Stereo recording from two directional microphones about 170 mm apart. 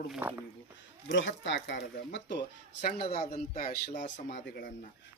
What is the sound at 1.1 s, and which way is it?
Speech, 90° left.